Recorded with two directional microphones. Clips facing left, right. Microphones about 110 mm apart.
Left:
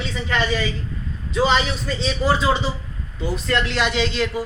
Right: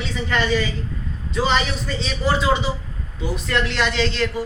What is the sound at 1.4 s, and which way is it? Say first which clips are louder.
Speech: left 2 dB; 5° left (ahead or behind).